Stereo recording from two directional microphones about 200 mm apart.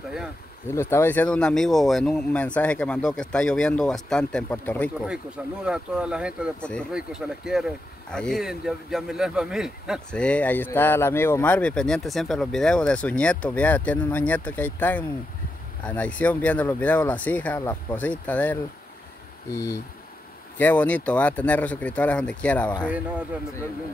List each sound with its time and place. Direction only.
0.7 s speech: 10° left (ahead or behind)
5.0 s speech: 5° right (ahead or behind)
22.8 s a man's voice: 5° right (ahead or behind)